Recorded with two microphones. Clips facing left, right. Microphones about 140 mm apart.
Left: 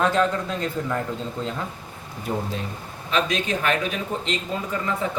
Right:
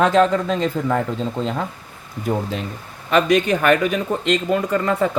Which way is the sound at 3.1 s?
65° right (ahead or behind).